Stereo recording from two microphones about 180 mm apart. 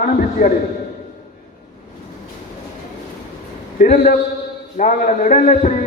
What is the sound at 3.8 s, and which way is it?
A man's voice, 45° left (ahead or behind).